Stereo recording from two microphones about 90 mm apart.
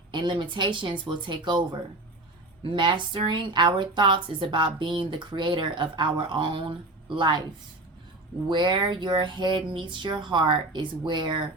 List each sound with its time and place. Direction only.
0.1 s speech: 60° right (ahead or behind)
8.4 s speech: 60° right (ahead or behind)